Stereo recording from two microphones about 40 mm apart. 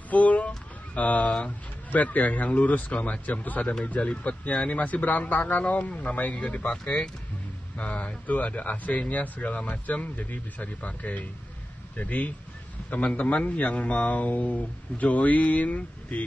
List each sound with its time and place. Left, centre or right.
0.1 s speech: left
4.0 s speech: left
4.7 s a man's voice: left
5.6 s speech: left